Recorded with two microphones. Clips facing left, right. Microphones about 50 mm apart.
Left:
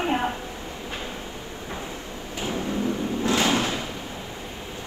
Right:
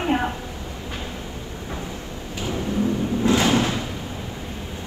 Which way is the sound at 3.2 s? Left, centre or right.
Right.